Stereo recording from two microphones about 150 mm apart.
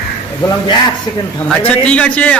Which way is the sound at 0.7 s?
30° left (ahead or behind).